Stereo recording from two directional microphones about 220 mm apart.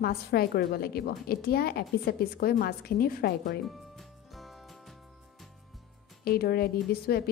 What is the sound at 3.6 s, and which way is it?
Music, centre (ahead or behind).